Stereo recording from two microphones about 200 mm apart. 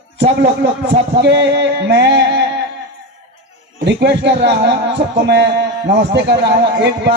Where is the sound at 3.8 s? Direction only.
60° right (ahead or behind).